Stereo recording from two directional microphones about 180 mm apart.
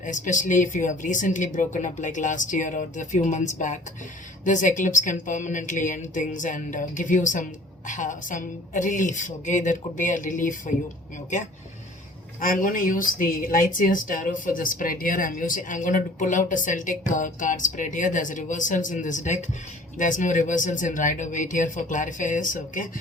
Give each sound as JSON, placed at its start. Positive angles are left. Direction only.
{"t": 0.0, "sound": "speech", "side_deg": 45}
{"t": 12.4, "sound": "speech", "side_deg": 50}